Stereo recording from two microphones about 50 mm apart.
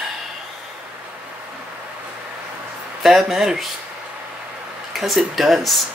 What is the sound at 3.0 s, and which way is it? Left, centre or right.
Speech, centre.